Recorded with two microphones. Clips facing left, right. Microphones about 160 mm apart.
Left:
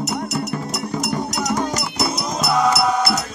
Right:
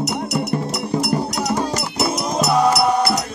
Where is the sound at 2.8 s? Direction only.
30° right (ahead or behind).